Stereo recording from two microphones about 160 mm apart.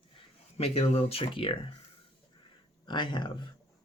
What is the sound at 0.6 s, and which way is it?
Speech, 40° left (ahead or behind).